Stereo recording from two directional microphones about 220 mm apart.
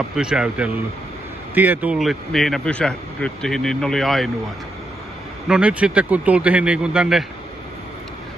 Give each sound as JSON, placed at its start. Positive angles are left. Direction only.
{"t": 0.1, "sound": "speech", "side_deg": -5}
{"t": 5.5, "sound": "speech", "side_deg": -5}